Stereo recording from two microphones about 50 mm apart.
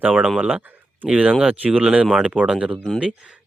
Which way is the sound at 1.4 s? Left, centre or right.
Right.